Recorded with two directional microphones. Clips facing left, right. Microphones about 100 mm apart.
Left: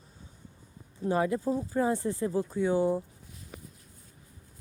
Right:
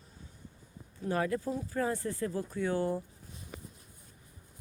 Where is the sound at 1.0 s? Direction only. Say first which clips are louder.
Left 4 dB; 20° left (ahead or behind).